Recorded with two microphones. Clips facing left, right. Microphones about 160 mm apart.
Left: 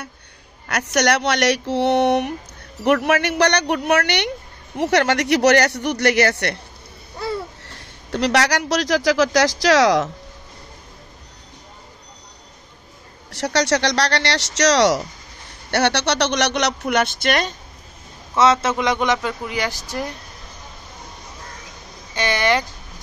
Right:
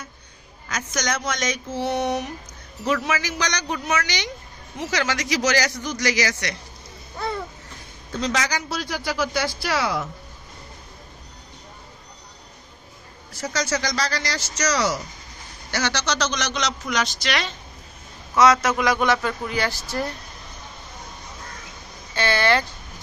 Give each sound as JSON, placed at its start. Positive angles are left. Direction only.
{"t": 0.7, "sound": "speech", "side_deg": 70}
{"t": 7.6, "sound": "speech", "side_deg": 75}
{"t": 13.3, "sound": "speech", "side_deg": 70}
{"t": 18.3, "sound": "a man's voice", "side_deg": 25}
{"t": 22.1, "sound": "speech", "side_deg": 15}